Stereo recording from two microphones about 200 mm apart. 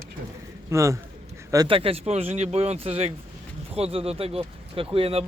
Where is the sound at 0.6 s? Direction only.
15° right (ahead or behind).